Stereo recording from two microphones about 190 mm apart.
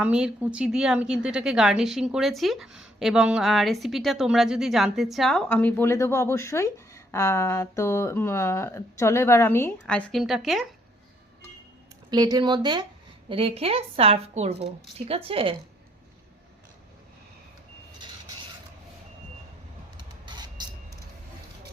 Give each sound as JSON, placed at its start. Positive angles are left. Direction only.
{"t": 0.0, "sound": "a woman's voice", "side_deg": -5}
{"t": 12.1, "sound": "a woman's voice", "side_deg": -20}
{"t": 20.2, "sound": "vehicle", "side_deg": -20}